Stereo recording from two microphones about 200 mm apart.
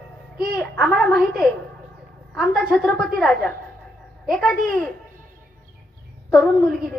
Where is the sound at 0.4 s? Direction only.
Centre (ahead or behind).